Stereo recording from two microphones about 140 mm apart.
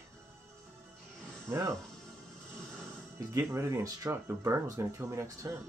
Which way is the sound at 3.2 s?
20° right (ahead or behind).